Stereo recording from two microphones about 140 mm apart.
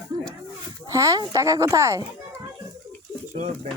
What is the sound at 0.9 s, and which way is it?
A woman's voice, 25° right (ahead or behind).